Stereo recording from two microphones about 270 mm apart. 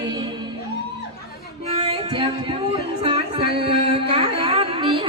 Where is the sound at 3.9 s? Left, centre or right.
Centre.